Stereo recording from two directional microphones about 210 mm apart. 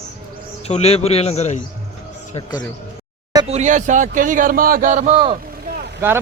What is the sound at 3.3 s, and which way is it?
Speech, 30° right (ahead or behind).